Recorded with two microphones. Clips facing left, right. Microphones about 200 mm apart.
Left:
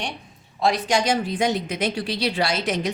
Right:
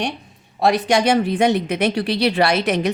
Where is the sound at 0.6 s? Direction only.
65° right (ahead or behind).